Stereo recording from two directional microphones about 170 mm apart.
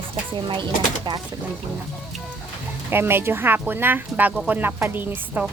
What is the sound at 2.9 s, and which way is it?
Speech, 15° right (ahead or behind).